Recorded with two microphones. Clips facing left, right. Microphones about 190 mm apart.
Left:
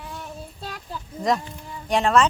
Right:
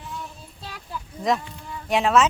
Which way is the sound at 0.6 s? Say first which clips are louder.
Even; 45° left (ahead or behind).